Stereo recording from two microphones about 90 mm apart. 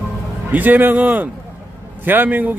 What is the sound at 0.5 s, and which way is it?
A man's voice, 20° right (ahead or behind).